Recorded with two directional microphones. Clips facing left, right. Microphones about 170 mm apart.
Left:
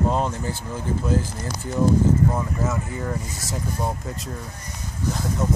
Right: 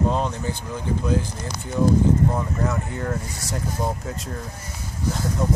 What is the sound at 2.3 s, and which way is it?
Speech, centre (ahead or behind).